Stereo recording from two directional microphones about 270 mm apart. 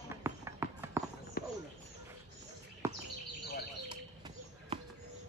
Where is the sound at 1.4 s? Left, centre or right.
Left.